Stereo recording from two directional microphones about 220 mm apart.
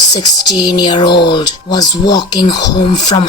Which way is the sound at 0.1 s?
20° left (ahead or behind).